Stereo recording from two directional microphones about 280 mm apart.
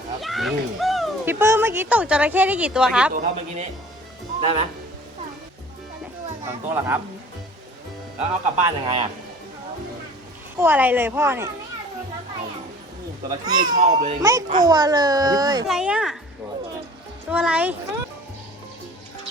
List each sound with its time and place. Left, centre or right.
0.2 s speech: centre
3.2 s speech: right
6.4 s a child's voice: centre
8.3 s speech: right
10.6 s a child's voice: centre
13.4 s a child's voice: centre
13.7 s speech: right
14.2 s a child's voice: centre
15.6 s speech: centre
17.2 s speech: centre